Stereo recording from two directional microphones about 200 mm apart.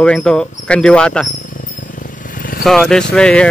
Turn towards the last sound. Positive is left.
turn(degrees=5)  # may be behind; listen again after turning